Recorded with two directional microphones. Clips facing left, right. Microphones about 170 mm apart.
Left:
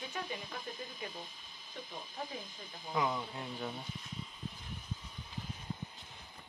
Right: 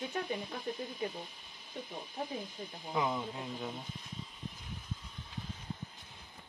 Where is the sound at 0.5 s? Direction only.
25° right (ahead or behind).